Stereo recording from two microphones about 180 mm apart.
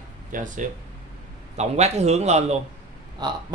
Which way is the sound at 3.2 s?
20° right (ahead or behind).